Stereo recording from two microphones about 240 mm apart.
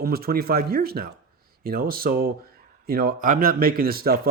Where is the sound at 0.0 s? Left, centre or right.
Right.